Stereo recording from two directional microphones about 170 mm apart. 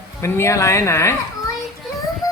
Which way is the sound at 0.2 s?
15° left (ahead or behind).